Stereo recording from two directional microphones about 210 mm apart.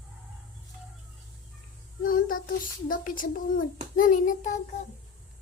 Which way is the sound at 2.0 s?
40° left (ahead or behind).